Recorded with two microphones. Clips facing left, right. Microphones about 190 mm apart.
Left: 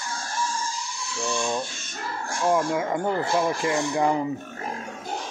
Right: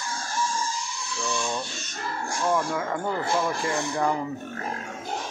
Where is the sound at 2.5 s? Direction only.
20° left (ahead or behind).